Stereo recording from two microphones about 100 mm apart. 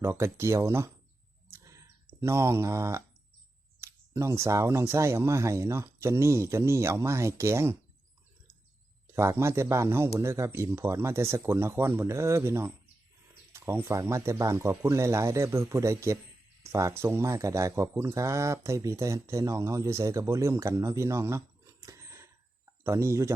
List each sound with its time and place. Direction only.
0.0 s speech: 25° right (ahead or behind)
1.5 s a sound: 30° right (ahead or behind)
3.8 s speech: 30° right (ahead or behind)
9.1 s speech: 25° right (ahead or behind)